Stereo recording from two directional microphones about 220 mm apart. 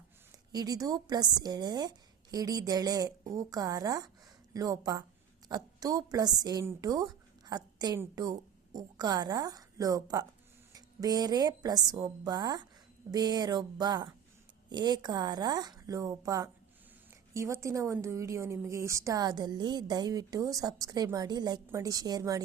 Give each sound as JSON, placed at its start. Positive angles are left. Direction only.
{"t": 0.5, "sound": "a woman's voice", "side_deg": -15}